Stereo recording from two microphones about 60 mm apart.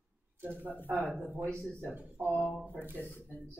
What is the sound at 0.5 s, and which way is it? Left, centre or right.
Speech, left.